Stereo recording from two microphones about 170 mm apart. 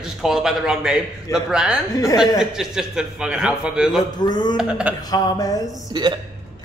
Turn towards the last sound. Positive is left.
turn(degrees=-25)  # may be behind; listen again after turning